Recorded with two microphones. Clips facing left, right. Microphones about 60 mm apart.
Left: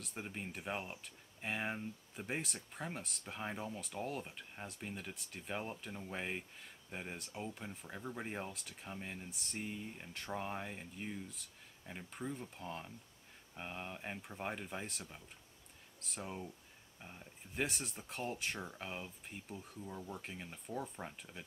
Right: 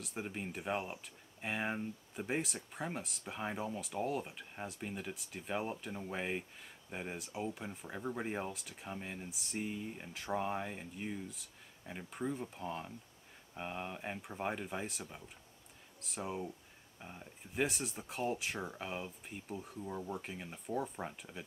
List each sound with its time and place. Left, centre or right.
0.0 s speech: centre
19.8 s speech: centre
20.2 s speech: centre